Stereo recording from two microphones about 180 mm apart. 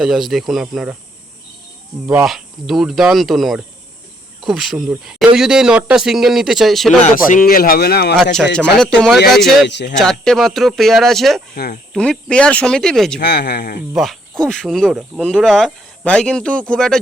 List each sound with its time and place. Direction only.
0.0 s speech: centre (ahead or behind)
2.2 s speech: centre (ahead or behind)
7.0 s speech: 50° left (ahead or behind)
8.1 s speech: 5° left (ahead or behind)
9.6 s speech: 75° left (ahead or behind)
10.0 s speech: centre (ahead or behind)
13.1 s speech: 65° left (ahead or behind)
13.9 s speech: centre (ahead or behind)